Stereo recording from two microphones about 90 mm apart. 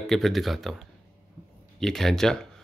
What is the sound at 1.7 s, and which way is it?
Speech, 5° left (ahead or behind).